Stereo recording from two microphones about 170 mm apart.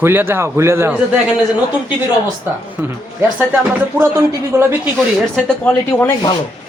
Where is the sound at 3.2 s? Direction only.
10° right (ahead or behind).